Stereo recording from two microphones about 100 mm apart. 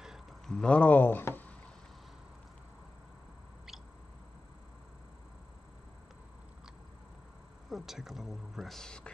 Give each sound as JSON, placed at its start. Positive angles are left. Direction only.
{"t": 0.0, "sound": "a sound", "side_deg": -5}
{"t": 0.6, "sound": "speech", "side_deg": 10}
{"t": 7.7, "sound": "speech", "side_deg": -5}